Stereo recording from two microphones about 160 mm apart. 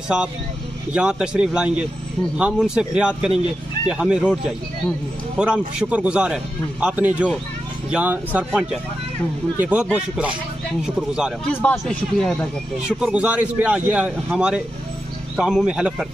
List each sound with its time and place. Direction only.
0.1 s a man's voice: 5° right (ahead or behind)
9.6 s a man's voice: 10° right (ahead or behind)